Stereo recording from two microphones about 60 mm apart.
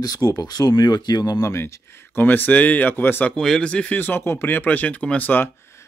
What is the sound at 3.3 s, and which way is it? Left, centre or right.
Speech, centre.